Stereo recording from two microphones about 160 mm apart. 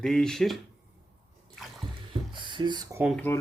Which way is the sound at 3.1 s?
10° left (ahead or behind).